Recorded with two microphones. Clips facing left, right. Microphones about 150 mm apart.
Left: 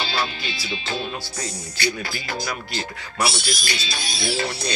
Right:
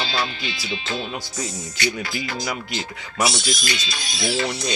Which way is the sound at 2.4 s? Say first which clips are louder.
Right 1 dB; 20° right (ahead or behind).